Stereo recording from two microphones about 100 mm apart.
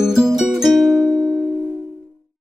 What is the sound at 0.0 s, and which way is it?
Music, 5° right (ahead or behind).